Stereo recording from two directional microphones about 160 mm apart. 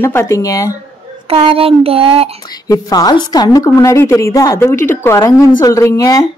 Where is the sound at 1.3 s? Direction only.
35° right (ahead or behind).